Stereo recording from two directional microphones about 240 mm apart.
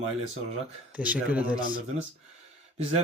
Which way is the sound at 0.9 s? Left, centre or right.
Centre.